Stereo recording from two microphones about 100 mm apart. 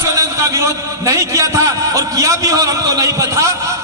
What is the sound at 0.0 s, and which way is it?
A man's voice, 30° right (ahead or behind).